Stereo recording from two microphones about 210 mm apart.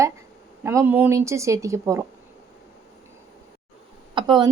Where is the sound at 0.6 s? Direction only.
15° right (ahead or behind).